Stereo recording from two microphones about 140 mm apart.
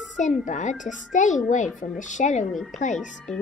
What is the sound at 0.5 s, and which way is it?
A child's voice, 60° left (ahead or behind).